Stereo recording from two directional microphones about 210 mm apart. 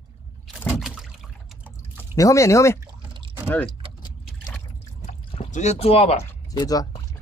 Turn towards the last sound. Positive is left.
turn(degrees=20)  # may be behind; listen again after turning